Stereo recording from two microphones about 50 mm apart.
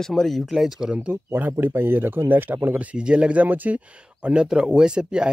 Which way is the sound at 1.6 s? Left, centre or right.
Right.